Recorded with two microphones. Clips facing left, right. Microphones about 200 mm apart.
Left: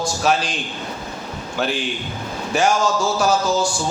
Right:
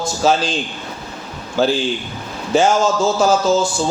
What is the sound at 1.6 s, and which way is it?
Speech, 30° right (ahead or behind).